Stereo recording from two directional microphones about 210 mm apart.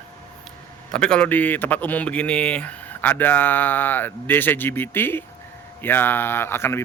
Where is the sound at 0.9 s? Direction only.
5° left (ahead or behind).